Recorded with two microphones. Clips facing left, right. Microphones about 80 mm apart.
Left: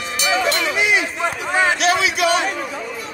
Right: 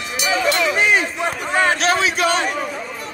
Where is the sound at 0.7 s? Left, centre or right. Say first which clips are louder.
Right 1 dB; right.